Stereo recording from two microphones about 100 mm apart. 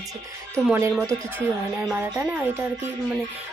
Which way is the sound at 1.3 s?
25° right (ahead or behind).